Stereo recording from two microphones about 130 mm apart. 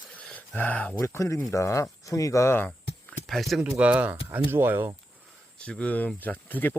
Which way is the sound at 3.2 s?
Centre (ahead or behind).